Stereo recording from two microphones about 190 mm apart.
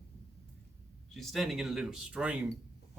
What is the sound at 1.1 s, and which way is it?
Speech, centre (ahead or behind).